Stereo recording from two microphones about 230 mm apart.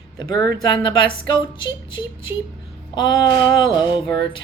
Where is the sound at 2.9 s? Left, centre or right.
Centre.